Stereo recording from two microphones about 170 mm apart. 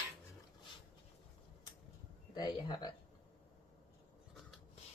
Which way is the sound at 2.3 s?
25° left (ahead or behind).